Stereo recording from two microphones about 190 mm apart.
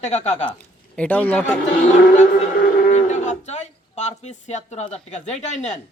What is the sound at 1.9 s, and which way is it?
A man's voice, 40° left (ahead or behind).